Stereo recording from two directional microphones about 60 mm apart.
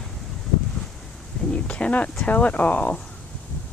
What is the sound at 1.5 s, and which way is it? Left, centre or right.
Speech, centre.